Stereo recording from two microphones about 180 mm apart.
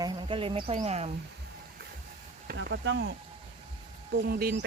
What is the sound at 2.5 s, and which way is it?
Speech, 65° right (ahead or behind).